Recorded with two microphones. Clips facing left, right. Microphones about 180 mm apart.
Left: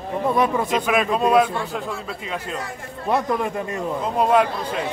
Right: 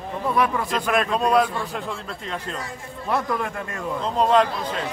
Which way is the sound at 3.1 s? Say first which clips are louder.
Left 3 dB; 20° left (ahead or behind).